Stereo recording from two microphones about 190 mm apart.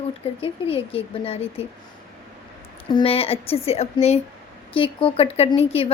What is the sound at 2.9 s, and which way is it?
A woman's voice, 30° left (ahead or behind).